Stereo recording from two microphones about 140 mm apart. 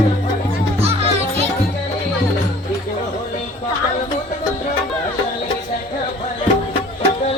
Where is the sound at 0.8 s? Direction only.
45° right (ahead or behind).